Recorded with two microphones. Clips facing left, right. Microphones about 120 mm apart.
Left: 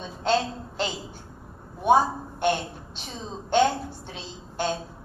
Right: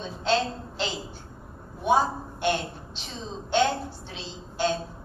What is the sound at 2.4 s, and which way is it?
A woman's voice, 50° left (ahead or behind).